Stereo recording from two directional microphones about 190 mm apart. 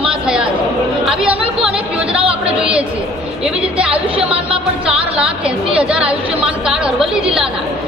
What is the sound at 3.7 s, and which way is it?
Speech, 5° right (ahead or behind).